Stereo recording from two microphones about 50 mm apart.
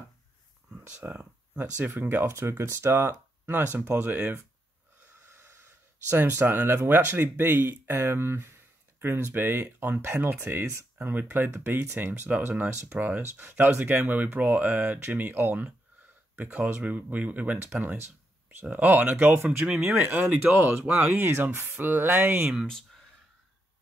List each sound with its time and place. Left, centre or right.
0.7 s speech: right
2.3 s speech: right
5.3 s snort: right
6.0 s speech: right
18.7 s speech: right
21.7 s speech: right
22.7 s speech: centre